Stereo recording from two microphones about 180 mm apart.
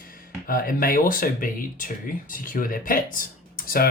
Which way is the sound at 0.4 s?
50° left (ahead or behind).